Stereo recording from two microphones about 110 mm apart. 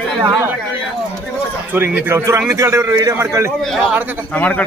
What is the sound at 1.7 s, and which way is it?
A man's voice, 20° right (ahead or behind).